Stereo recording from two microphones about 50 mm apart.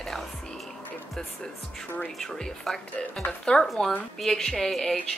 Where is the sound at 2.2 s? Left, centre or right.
Centre.